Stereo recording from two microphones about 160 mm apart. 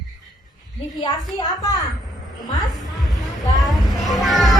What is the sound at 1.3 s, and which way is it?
Speech, 25° left (ahead or behind).